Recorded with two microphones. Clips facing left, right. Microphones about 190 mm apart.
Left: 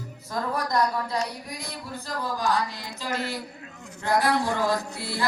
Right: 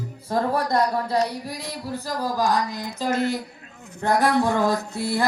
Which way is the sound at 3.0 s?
50° right (ahead or behind).